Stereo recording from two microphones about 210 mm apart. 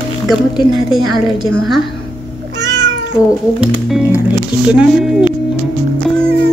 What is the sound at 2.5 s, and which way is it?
Cat, 55° right (ahead or behind).